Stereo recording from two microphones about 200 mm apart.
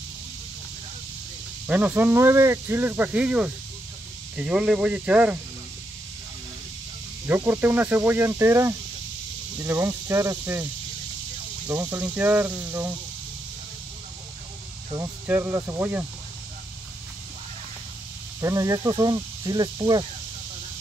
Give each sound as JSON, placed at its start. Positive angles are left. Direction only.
{"t": 1.7, "sound": "speech", "side_deg": -10}
{"t": 7.2, "sound": "speech", "side_deg": -10}
{"t": 15.0, "sound": "speech", "side_deg": -10}
{"t": 18.4, "sound": "speech", "side_deg": -15}